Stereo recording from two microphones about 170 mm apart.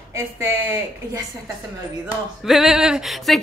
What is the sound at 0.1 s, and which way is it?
Speech, 20° right (ahead or behind).